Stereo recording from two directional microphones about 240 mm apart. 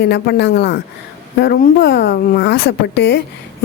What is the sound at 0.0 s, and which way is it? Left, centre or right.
A woman's voice, left.